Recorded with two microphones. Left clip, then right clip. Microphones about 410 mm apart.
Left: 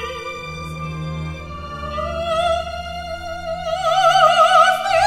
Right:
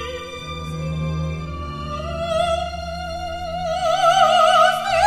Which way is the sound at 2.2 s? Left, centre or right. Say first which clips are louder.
Left 1 dB; left.